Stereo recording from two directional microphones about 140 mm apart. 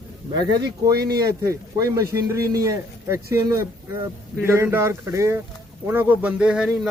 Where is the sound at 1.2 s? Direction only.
25° right (ahead or behind); by 6.9 s 5° right (ahead or behind).